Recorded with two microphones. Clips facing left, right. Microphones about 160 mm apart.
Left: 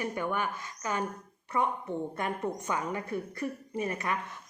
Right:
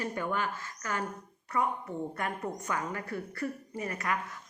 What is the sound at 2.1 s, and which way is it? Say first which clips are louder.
Speech: left 2 dB; 20° left (ahead or behind).